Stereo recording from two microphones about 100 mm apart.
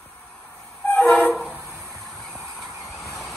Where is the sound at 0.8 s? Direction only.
15° left (ahead or behind).